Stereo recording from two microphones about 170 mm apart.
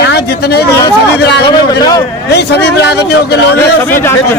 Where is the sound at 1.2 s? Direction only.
85° left.